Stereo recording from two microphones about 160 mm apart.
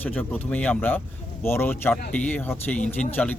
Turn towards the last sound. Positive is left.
turn(degrees=10)  # may be behind; listen again after turning